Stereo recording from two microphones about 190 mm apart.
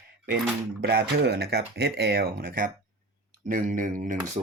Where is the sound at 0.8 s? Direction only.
60° right (ahead or behind); by 4.2 s 45° right (ahead or behind).